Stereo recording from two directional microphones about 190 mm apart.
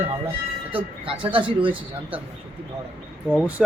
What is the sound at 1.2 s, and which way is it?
Speech, 25° right (ahead or behind).